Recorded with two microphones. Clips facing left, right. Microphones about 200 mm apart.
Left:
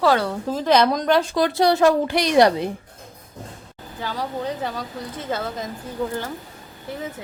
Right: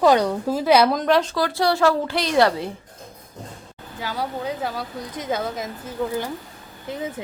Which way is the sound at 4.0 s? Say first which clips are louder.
Even; 10° right (ahead or behind).